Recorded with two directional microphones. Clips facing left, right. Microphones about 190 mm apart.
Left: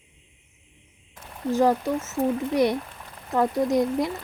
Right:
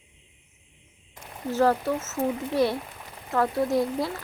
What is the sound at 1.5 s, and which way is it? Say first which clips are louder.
Speech: left 2 dB; 15° left (ahead or behind).